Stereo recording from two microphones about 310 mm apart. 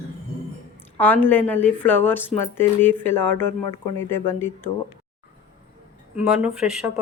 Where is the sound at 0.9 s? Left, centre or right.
Centre.